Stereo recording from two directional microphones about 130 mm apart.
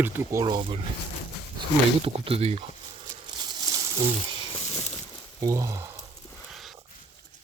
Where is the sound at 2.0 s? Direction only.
45° right (ahead or behind).